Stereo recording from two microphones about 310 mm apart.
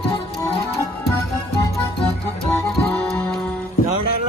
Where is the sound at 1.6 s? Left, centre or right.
Centre.